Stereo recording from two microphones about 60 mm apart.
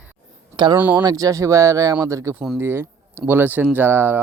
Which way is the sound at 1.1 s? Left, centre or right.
Right.